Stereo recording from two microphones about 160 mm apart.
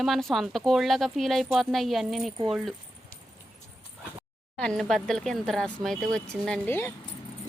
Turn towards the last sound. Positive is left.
turn(degrees=10)  # may be behind; listen again after turning